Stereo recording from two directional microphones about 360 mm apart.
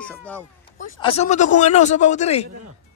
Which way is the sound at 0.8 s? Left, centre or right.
Centre.